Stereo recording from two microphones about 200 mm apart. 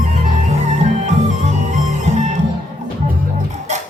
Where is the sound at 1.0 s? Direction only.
35° right (ahead or behind).